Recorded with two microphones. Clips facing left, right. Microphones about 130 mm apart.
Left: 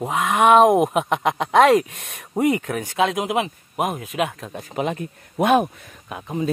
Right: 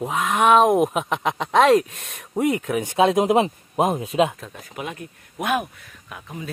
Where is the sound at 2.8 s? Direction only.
25° right (ahead or behind).